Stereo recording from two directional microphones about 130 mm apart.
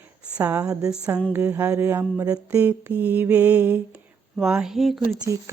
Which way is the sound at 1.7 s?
15° right (ahead or behind).